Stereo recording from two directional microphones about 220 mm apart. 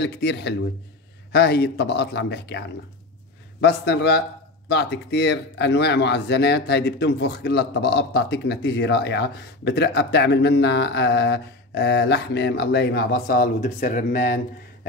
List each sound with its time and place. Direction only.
0.0 s speech: 50° left (ahead or behind)
3.6 s speech: 50° left (ahead or behind)